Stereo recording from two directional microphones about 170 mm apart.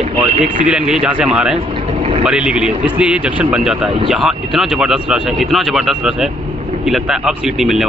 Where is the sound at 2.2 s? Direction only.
5° right (ahead or behind).